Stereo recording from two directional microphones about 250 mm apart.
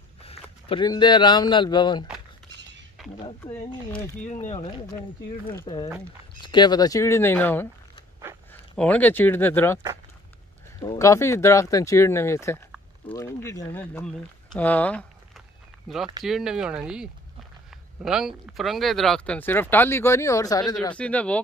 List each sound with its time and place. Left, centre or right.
0.2 s speech: left
3.0 s a sound: centre
3.4 s speech: centre
8.7 s speech: centre
10.8 s speech: centre